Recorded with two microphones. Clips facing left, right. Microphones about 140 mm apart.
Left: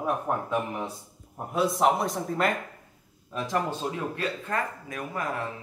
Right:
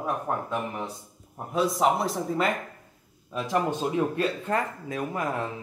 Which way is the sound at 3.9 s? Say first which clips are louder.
Right 5 dB; 25° right (ahead or behind).